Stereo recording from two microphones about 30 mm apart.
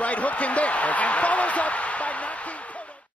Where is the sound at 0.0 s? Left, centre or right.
Left.